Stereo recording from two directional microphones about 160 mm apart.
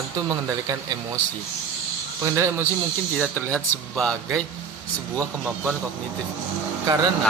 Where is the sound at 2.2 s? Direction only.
20° right (ahead or behind).